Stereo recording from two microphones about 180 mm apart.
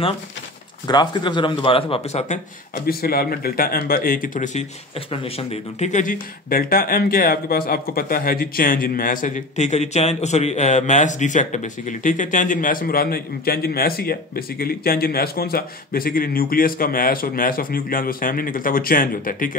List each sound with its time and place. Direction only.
0.8 s a man's voice: 25° left (ahead or behind); by 2.8 s 40° left (ahead or behind)
2.9 s speech: 55° left (ahead or behind)